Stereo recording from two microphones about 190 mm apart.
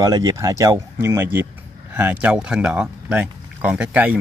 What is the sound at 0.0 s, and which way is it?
A man's voice, 20° right (ahead or behind).